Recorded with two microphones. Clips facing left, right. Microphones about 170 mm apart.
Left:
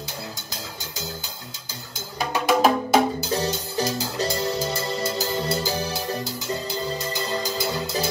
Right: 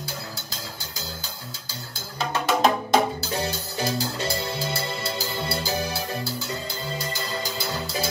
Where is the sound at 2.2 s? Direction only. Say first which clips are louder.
Left 2 dB; 10° left (ahead or behind).